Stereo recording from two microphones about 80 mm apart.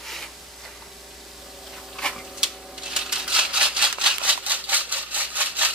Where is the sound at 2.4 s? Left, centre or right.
Centre.